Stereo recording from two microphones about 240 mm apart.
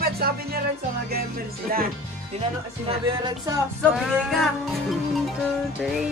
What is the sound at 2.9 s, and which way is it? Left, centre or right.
Music, centre.